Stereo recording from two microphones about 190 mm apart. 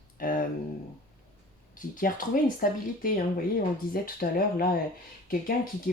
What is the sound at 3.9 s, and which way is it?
Speech, 50° left (ahead or behind).